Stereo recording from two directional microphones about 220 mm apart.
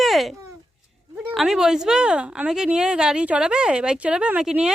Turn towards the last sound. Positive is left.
turn(degrees=-5)  # may be behind; listen again after turning